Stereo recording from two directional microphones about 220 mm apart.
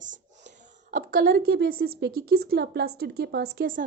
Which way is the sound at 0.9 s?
40° right (ahead or behind).